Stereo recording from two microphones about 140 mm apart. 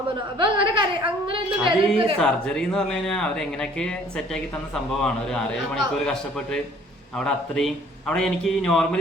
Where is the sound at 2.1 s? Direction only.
5° left (ahead or behind).